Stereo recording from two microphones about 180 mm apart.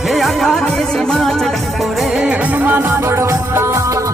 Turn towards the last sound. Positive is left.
turn(degrees=-15)  # may be behind; listen again after turning